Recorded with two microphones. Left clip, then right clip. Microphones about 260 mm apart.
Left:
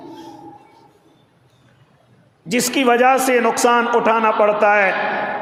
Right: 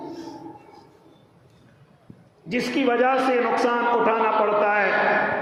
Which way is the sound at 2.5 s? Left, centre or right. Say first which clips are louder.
Left 6 dB; left.